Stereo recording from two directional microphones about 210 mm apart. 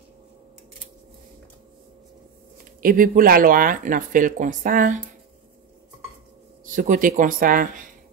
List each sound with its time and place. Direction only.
2.8 s speech: 40° right (ahead or behind)
6.6 s speech: 40° right (ahead or behind)